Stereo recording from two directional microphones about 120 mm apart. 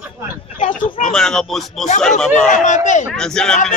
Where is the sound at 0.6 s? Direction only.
90° left.